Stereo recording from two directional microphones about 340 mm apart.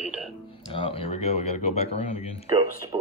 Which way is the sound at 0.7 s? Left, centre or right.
Centre.